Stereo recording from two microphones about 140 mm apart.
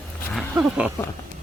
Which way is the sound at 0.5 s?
10° right (ahead or behind).